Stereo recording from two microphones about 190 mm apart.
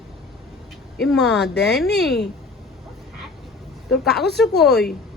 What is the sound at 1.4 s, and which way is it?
Speech, 65° left (ahead or behind).